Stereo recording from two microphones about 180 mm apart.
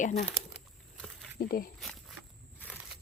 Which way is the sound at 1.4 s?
55° left (ahead or behind).